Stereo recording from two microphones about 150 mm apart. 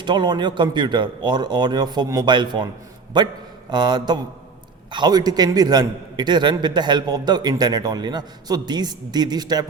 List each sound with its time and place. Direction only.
0.0 s a man's voice: 30° right (ahead or behind)